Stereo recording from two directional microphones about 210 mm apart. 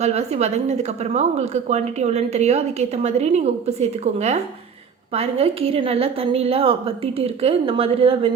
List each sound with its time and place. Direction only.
0.0 s a woman's voice: 30° right (ahead or behind)